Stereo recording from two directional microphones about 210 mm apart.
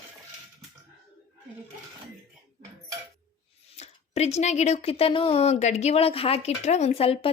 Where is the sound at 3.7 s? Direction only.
30° left (ahead or behind).